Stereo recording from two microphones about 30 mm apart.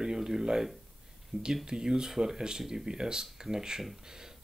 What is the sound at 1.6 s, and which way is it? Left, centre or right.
Speech, right.